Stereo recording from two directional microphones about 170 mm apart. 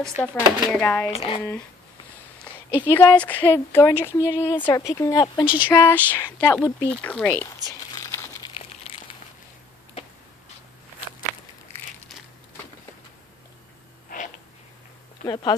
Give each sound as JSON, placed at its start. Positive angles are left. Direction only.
{"t": 0.2, "sound": "speech", "side_deg": 5}
{"t": 1.1, "sound": "speech", "side_deg": 35}
{"t": 2.5, "sound": "a sound", "side_deg": 10}
{"t": 2.8, "sound": "speech", "side_deg": 10}
{"t": 5.4, "sound": "speech", "side_deg": -10}
{"t": 5.7, "sound": "speech", "side_deg": 10}
{"t": 8.0, "sound": "crumpling", "side_deg": 15}
{"t": 15.2, "sound": "speech", "side_deg": 25}